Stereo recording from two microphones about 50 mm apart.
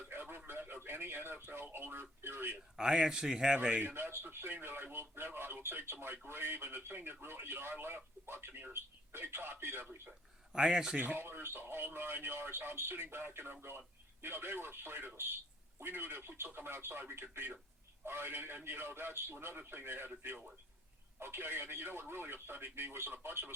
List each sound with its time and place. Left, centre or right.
0.1 s radio: right
0.7 s a sound: right
1.5 s speech: right
2.7 s speech: centre
3.9 s speech: right
10.1 s speech: centre
10.9 s speech: right
11.2 s speech: right